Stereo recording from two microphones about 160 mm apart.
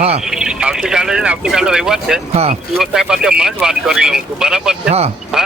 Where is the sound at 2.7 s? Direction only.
Centre (ahead or behind).